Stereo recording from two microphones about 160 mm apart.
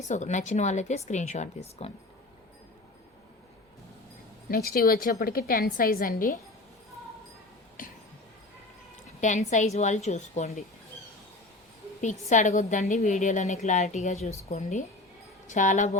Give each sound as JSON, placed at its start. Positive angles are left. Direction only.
{"t": 0.0, "sound": "a woman's voice", "side_deg": 50}
{"t": 4.4, "sound": "a woman's voice", "side_deg": 70}
{"t": 7.8, "sound": "a sound", "side_deg": 60}
{"t": 9.2, "sound": "a woman's voice", "side_deg": 50}
{"t": 12.3, "sound": "a woman's voice", "side_deg": 45}